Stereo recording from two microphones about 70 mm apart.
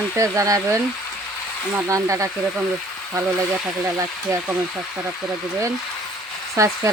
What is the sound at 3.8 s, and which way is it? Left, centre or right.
Speech, right.